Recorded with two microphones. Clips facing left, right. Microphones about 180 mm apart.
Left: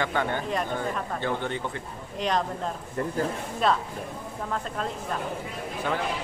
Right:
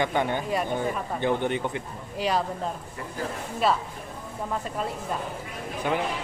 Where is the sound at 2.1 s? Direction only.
5° right (ahead or behind).